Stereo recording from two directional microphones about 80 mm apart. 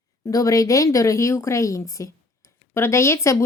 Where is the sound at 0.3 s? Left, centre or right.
Left.